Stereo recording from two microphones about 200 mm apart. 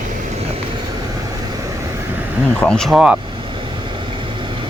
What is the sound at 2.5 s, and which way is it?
Speech, 5° left (ahead or behind).